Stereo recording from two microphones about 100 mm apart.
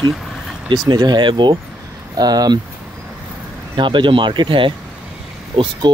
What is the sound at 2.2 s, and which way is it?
Speech, 40° right (ahead or behind).